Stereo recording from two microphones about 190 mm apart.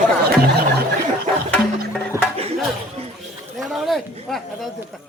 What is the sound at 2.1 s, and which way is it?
Music, 15° right (ahead or behind).